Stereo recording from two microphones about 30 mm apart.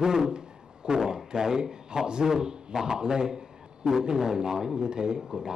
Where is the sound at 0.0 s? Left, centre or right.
Right.